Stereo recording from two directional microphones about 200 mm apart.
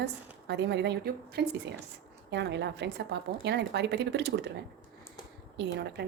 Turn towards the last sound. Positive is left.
turn(degrees=-55)  # may be behind; listen again after turning